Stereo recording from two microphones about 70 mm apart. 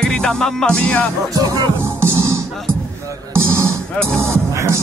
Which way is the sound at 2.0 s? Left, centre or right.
Right.